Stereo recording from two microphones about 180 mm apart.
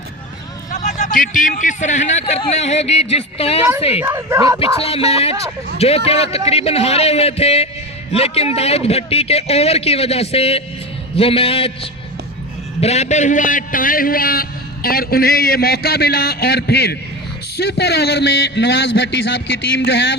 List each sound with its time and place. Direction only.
0.7 s a man's voice: 50° left (ahead or behind); by 4.0 s 35° left (ahead or behind)
4.0 s speech: 15° right (ahead or behind)
4.8 s a man's voice: 35° left (ahead or behind); by 19.2 s 70° left (ahead or behind)